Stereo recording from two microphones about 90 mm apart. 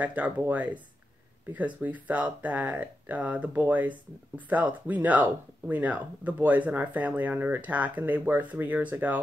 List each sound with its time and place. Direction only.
0.0 s speech: 15° right (ahead or behind)
1.8 s speech: 15° right (ahead or behind)